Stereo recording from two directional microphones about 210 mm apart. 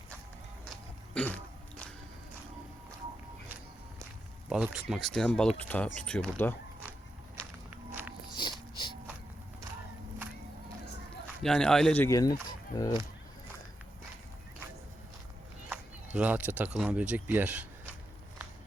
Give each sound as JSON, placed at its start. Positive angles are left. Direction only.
{"t": 1.1, "sound": "throat clearing", "side_deg": 5}
{"t": 4.4, "sound": "speech", "side_deg": -5}
{"t": 8.4, "sound": "dog", "side_deg": 20}
{"t": 11.4, "sound": "speech", "side_deg": 5}
{"t": 16.1, "sound": "speech", "side_deg": -5}